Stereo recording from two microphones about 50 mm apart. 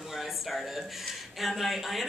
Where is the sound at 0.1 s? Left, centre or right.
Centre.